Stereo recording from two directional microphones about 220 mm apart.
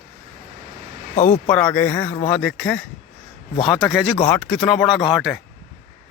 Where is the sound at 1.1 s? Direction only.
35° left (ahead or behind).